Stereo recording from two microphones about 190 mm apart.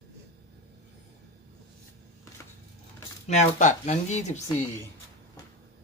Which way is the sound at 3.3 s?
40° left (ahead or behind).